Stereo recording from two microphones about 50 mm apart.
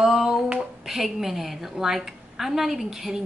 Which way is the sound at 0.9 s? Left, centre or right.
Centre.